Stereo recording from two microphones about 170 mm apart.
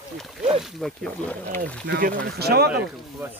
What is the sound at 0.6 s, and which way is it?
Speech, centre (ahead or behind).